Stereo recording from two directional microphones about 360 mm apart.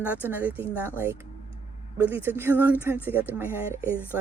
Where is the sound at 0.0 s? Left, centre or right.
Centre.